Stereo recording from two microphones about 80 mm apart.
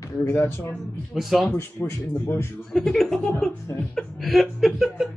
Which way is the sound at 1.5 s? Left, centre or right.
Left.